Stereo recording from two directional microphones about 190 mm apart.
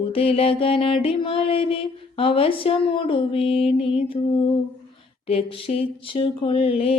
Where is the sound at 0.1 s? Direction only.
30° left (ahead or behind).